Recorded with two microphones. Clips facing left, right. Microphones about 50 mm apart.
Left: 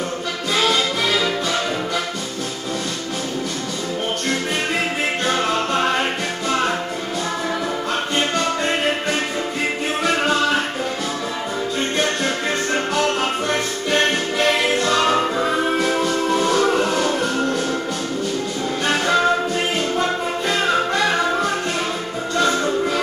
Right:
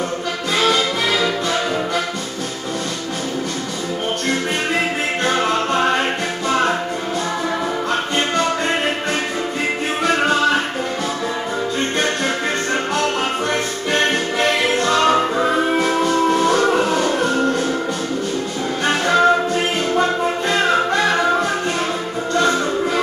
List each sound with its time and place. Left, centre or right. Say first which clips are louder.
5.2 s music: right 3 dB; centre
10.0 s music: right 3 dB; centre
12.9 s music: even; centre
18.9 s music: right 3 dB; centre